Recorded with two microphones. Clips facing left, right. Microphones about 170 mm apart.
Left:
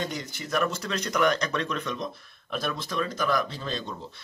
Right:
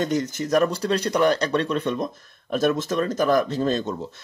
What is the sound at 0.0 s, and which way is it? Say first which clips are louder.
Speech: right 10 dB; 45° right (ahead or behind).